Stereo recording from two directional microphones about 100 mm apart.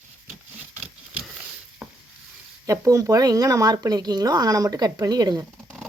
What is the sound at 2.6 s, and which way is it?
Speech, 30° right (ahead or behind).